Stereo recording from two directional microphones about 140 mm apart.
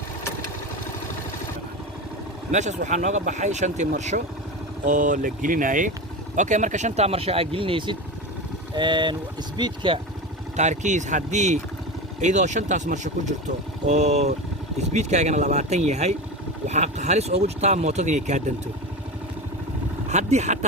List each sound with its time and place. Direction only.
2.5 s speech: 60° right (ahead or behind)
4.9 s speech: 70° right (ahead or behind); by 10.0 s 35° right (ahead or behind)
10.6 s speech: 60° right (ahead or behind)
20.1 s speech: 55° right (ahead or behind)